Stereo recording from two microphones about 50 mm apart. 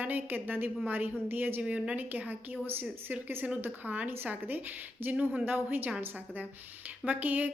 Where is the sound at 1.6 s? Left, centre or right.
Right.